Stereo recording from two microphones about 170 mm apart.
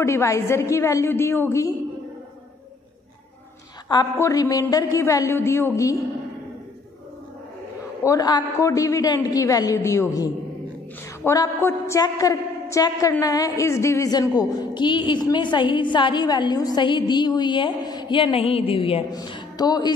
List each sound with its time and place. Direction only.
0.0 s a woman's voice: 15° left (ahead or behind)
3.9 s a woman's voice: 20° left (ahead or behind)
8.0 s a woman's voice: 20° left (ahead or behind)